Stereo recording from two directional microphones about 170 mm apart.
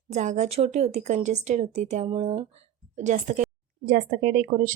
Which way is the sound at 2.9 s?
45° right (ahead or behind).